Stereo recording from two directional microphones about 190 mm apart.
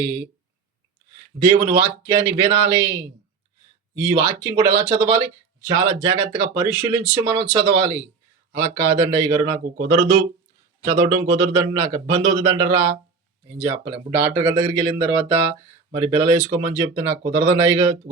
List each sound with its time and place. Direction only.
0.0 s speech: 15° right (ahead or behind)
1.4 s speech: 15° right (ahead or behind)